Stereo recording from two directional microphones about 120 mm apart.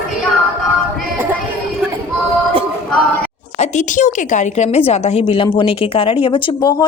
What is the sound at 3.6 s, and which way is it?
A woman's voice, 85° left.